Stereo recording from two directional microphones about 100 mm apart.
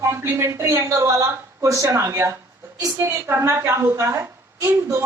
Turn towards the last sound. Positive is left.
turn(degrees=-25)  # may be behind; listen again after turning